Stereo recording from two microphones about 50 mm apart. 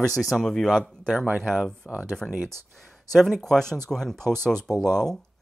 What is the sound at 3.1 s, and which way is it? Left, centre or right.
Speech, centre.